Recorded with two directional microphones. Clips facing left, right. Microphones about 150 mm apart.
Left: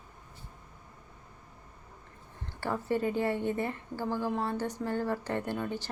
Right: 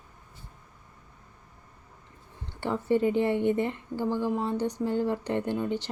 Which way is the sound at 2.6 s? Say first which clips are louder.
Right 5 dB; 20° right (ahead or behind).